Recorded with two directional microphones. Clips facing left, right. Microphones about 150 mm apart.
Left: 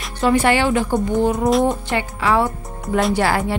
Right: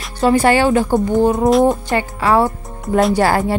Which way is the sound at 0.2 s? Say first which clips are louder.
Right 3 dB; 35° right (ahead or behind).